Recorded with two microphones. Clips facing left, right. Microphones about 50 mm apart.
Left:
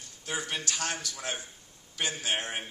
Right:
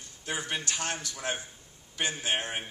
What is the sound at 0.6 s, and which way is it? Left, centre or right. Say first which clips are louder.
A man's voice: even; right.